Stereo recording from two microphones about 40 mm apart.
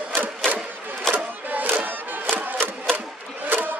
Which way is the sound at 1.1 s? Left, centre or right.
Right.